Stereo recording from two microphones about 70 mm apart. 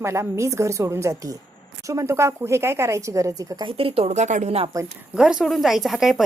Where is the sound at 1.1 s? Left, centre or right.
Right.